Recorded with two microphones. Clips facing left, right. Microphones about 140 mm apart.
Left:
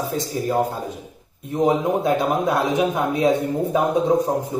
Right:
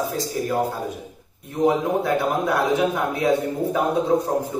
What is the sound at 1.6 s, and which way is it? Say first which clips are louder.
A man's voice: left 1 dB; 15° left (ahead or behind).